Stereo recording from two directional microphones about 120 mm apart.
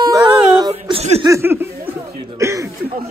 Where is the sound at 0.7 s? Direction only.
60° right (ahead or behind).